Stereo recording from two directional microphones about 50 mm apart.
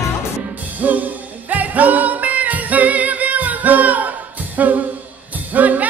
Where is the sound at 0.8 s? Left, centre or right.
Right.